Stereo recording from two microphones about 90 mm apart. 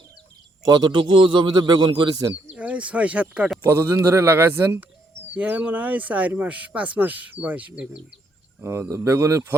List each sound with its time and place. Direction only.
0.6 s a man's voice: 50° right (ahead or behind)
2.6 s speech: 15° right (ahead or behind)
3.6 s speech: 30° right (ahead or behind); by 8.0 s 15° right (ahead or behind)
8.6 s speech: 35° right (ahead or behind)